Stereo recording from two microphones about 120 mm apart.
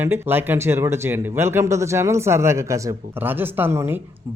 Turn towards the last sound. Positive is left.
turn(degrees=-20)  # may be behind; listen again after turning